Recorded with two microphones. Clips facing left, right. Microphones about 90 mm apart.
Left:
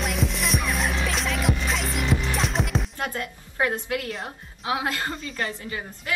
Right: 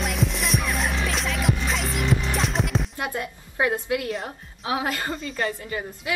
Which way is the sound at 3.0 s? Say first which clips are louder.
Right 1 dB; 15° right (ahead or behind).